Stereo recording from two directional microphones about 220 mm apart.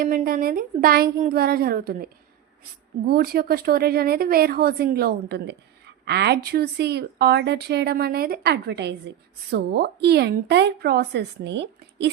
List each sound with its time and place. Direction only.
0.0 s a woman's voice: 40° right (ahead or behind)
3.1 s a woman's voice: 45° right (ahead or behind)